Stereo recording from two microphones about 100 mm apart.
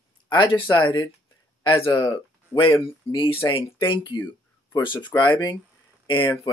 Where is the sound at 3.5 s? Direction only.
60° left (ahead or behind).